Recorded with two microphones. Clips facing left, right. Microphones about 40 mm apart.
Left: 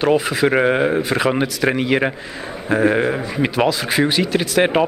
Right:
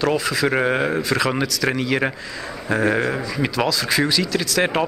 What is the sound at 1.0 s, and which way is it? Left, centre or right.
Speech, left.